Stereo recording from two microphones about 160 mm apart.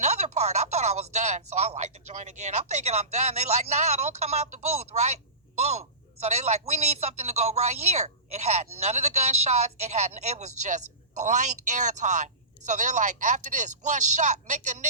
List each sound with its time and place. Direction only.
0.0 s a man's voice: 45° right (ahead or behind)